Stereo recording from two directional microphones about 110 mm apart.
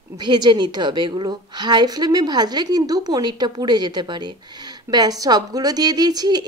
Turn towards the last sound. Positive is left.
turn(degrees=-40)  # may be behind; listen again after turning